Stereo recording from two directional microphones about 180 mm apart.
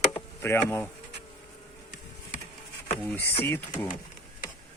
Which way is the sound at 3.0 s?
10° left (ahead or behind).